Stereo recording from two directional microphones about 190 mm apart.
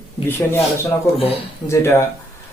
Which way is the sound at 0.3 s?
15° left (ahead or behind).